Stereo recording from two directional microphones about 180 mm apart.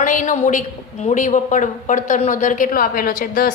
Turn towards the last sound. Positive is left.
turn(degrees=50)  # may be behind; listen again after turning